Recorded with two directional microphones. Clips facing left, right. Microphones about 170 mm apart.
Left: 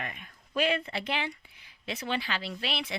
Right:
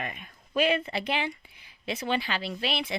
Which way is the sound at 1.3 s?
15° right (ahead or behind).